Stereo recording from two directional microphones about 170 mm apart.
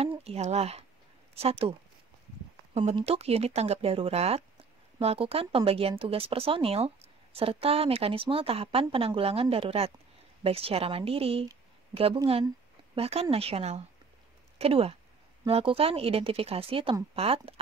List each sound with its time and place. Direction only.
0.2 s a woman's voice: 40° right (ahead or behind)